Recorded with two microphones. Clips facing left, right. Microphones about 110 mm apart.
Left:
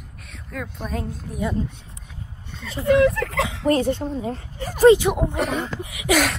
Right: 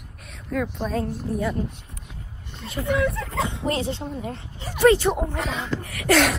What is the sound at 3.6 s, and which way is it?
Speech, 45° left (ahead or behind).